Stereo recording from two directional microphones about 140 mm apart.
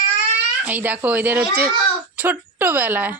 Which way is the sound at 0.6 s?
10° right (ahead or behind).